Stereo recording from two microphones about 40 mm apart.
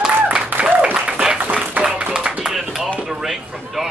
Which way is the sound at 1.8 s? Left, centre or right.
Right.